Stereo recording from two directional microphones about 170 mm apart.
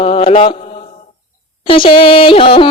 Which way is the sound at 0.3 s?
35° left (ahead or behind).